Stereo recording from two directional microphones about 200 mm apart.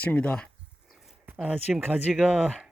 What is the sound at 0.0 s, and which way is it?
Speech, 5° left (ahead or behind).